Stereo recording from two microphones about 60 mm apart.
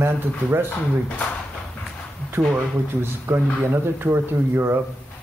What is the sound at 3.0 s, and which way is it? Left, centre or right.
Speech, right.